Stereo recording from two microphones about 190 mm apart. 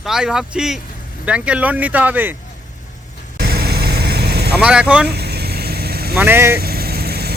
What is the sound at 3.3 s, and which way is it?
Vehicle, 55° right (ahead or behind).